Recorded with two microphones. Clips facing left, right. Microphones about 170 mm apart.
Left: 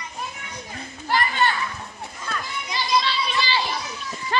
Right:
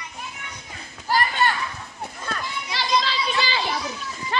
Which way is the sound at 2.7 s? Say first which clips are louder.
Left 1 dB; 90° right.